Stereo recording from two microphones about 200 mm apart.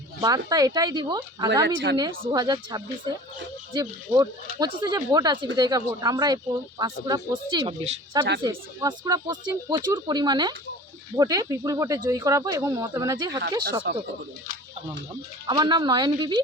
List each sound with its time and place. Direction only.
0.2 s speech: 15° right (ahead or behind)
1.6 s speech: 65° right (ahead or behind)
2.3 s speech: 20° right (ahead or behind)
4.2 s speech: 20° right (ahead or behind)
15.4 s speech: 20° right (ahead or behind)